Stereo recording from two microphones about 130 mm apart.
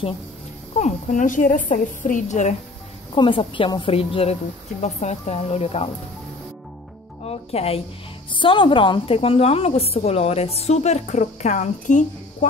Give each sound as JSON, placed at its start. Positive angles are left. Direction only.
{"t": 0.7, "sound": "a woman's voice", "side_deg": 70}
{"t": 3.2, "sound": "a woman's voice", "side_deg": 40}
{"t": 7.2, "sound": "speech", "side_deg": 50}
{"t": 8.3, "sound": "a woman's voice", "side_deg": 40}